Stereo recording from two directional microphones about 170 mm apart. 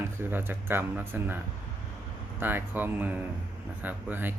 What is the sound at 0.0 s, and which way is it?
Speech, 15° right (ahead or behind).